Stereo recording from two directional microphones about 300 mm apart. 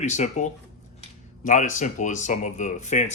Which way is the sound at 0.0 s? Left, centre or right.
Left.